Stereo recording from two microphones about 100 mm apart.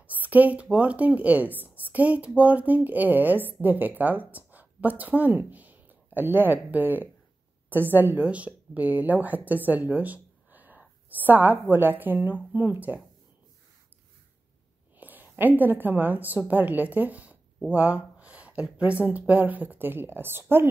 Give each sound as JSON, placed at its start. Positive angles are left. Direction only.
{"t": 0.0, "sound": "a woman's voice", "side_deg": -15}
{"t": 15.0, "sound": "a woman's voice", "side_deg": -15}